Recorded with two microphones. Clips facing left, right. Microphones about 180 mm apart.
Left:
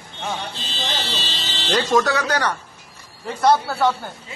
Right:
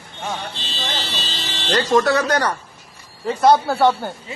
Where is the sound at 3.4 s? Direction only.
25° right (ahead or behind).